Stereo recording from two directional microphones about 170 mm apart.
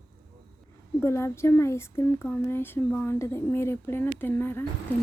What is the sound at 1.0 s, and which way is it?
Speech, 15° left (ahead or behind).